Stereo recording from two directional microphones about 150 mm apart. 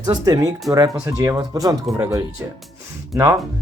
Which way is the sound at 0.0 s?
25° right (ahead or behind).